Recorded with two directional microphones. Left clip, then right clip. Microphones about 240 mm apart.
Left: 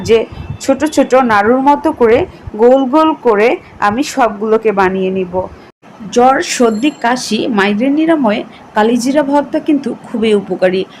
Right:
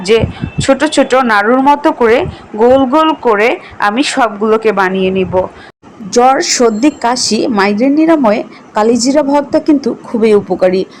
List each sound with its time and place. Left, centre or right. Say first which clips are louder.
0.0 s speech: right 1 dB; centre